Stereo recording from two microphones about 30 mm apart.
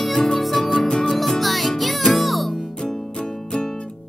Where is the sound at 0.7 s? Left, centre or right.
Left.